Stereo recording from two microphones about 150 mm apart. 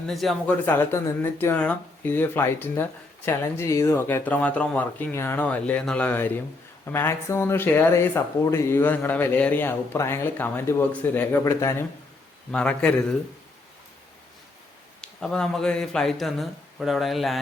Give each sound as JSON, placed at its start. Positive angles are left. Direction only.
{"t": 0.1, "sound": "a man's voice", "side_deg": 0}
{"t": 0.6, "sound": "speech", "side_deg": 15}
{"t": 12.5, "sound": "speech", "side_deg": 5}
{"t": 15.2, "sound": "a man's voice", "side_deg": 5}